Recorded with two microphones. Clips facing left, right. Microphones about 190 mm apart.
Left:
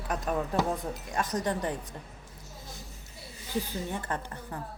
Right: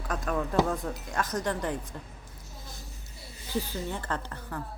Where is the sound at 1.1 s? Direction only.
15° left (ahead or behind).